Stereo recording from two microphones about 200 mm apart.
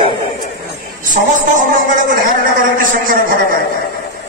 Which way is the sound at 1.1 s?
40° right (ahead or behind).